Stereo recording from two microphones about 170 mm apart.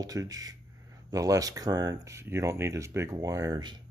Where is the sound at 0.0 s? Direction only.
20° right (ahead or behind).